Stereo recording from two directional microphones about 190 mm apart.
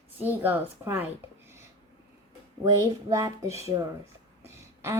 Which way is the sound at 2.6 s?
20° right (ahead or behind).